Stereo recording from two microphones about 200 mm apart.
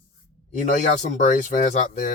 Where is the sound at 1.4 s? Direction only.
40° left (ahead or behind).